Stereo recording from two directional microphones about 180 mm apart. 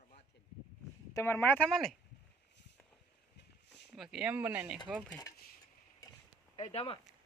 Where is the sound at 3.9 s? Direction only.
Centre (ahead or behind).